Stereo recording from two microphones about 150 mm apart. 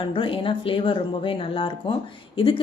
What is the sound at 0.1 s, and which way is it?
A woman's voice, 35° left (ahead or behind).